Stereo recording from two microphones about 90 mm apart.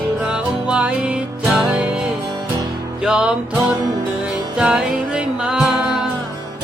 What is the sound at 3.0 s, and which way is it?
Music, 10° right (ahead or behind).